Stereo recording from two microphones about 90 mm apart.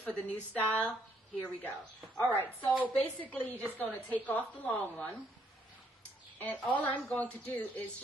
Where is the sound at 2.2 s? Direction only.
25° right (ahead or behind).